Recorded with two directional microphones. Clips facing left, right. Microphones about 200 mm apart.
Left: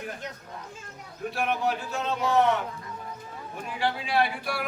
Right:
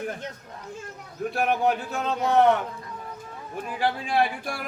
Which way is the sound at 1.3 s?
50° right (ahead or behind).